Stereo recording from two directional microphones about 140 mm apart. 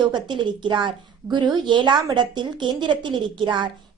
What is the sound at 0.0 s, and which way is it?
A woman's voice, 30° right (ahead or behind).